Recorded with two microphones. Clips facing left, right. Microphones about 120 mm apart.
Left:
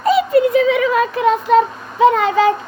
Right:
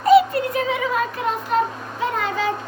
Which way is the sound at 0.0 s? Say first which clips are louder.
Left 1 dB; 90° left.